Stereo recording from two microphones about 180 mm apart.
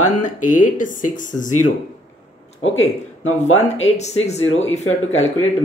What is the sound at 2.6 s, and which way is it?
Speech, 90° left.